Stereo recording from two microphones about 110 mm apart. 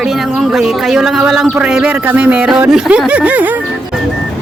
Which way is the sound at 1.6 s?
10° right (ahead or behind).